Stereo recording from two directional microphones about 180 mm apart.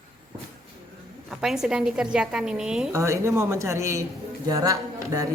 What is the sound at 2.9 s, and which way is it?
A woman's voice, 15° right (ahead or behind).